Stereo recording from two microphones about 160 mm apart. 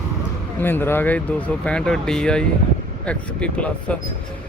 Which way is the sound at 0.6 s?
15° left (ahead or behind).